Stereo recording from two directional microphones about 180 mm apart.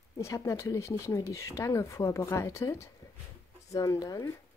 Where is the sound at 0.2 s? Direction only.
15° left (ahead or behind).